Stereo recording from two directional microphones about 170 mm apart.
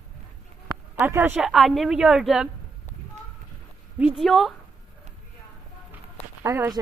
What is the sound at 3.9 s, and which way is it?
Speech, 5° right (ahead or behind).